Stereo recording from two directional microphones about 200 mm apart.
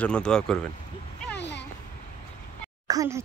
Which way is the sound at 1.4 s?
60° left (ahead or behind).